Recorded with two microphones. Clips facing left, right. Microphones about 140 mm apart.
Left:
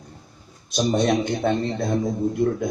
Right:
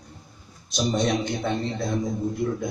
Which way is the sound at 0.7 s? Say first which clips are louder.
Left 4 dB; 55° left (ahead or behind).